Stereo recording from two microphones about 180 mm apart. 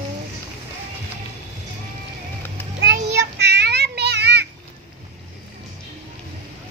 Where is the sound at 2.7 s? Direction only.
70° right (ahead or behind).